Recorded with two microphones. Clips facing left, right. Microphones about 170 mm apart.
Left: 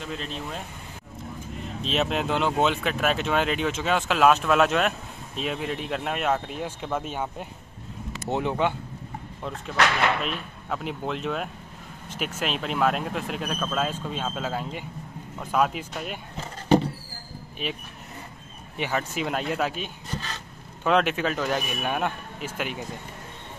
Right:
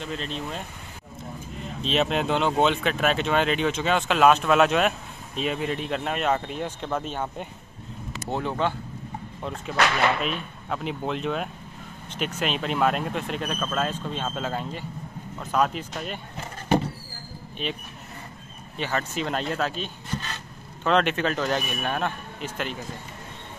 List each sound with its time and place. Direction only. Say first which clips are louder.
0.0 s speech: right 2 dB; 5° left (ahead or behind)
1.8 s speech: right 2 dB; centre (ahead or behind)
10.2 s speech: right 2 dB; centre (ahead or behind)
17.6 s speech: right 1 dB; 5° left (ahead or behind)
18.8 s speech: even; 10° left (ahead or behind)